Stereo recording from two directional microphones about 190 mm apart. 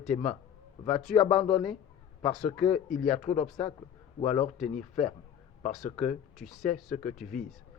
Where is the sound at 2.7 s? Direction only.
40° left (ahead or behind).